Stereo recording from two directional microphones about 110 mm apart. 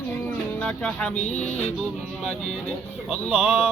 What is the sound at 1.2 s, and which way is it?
Music, 90° left.